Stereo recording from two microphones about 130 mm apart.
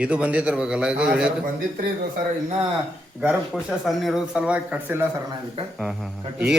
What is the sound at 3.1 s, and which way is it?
A man's voice, 5° right (ahead or behind).